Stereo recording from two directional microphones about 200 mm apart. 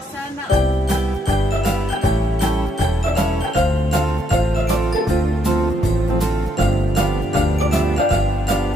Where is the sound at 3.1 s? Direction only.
Centre (ahead or behind).